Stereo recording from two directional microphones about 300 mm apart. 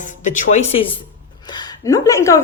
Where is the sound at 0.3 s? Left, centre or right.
Left.